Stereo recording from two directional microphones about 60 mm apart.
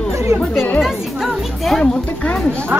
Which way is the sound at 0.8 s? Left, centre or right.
Centre.